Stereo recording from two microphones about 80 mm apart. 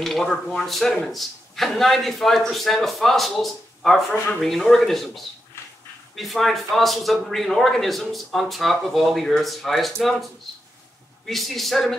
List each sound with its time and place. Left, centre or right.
0.0 s a man's voice: centre